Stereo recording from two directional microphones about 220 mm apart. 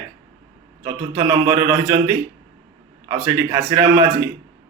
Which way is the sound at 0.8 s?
15° right (ahead or behind).